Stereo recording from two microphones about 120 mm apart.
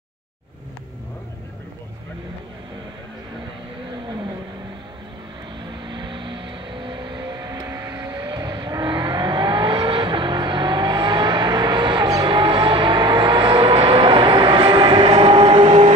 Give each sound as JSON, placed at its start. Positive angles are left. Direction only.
{"t": 5.6, "sound": "vehicle", "side_deg": -40}
{"t": 15.1, "sound": "train", "side_deg": -55}
{"t": 15.6, "sound": "vehicle", "side_deg": -50}